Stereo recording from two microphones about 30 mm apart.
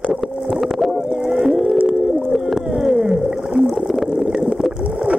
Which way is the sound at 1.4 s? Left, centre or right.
Centre.